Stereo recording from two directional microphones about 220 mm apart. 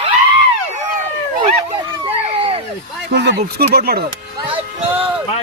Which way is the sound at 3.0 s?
50° right (ahead or behind).